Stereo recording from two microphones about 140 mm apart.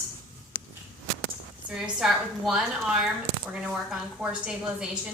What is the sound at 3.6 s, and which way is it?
A woman's voice, 5° right (ahead or behind).